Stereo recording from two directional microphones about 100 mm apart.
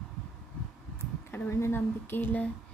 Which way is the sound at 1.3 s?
25° left (ahead or behind).